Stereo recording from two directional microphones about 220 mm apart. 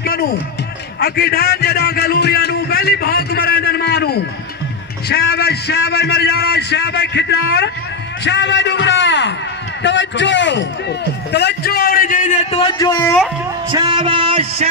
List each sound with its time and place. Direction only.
0.0 s a man's voice: 45° left (ahead or behind)
12.7 s speech: 15° left (ahead or behind)
13.7 s speech: 20° right (ahead or behind)